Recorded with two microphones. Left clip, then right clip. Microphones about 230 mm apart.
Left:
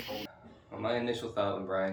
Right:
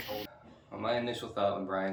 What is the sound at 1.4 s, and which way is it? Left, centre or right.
Speech, centre.